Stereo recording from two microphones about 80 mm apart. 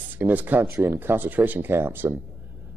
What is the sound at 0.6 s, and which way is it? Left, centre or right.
Speech, right.